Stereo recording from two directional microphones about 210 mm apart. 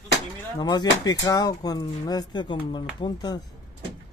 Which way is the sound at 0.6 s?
20° left (ahead or behind).